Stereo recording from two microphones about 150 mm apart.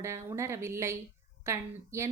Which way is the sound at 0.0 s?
20° right (ahead or behind).